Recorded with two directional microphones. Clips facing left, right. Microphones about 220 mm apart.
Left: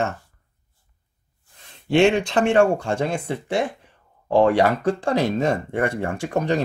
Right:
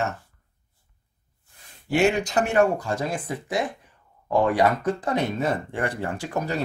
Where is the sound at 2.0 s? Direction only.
30° left (ahead or behind).